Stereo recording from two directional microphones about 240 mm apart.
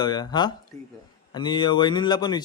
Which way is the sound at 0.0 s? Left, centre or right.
Centre.